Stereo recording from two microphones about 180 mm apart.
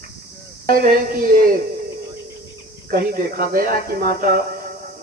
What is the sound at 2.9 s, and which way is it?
A man's voice, 55° right (ahead or behind).